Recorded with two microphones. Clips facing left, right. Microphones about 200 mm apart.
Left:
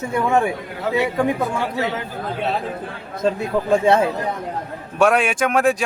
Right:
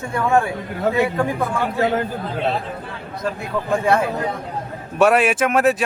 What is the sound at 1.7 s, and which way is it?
Speech, 50° right (ahead or behind).